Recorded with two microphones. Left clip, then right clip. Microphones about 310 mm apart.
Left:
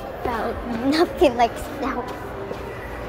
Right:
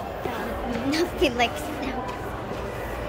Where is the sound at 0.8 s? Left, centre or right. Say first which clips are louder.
Left 7 dB; centre.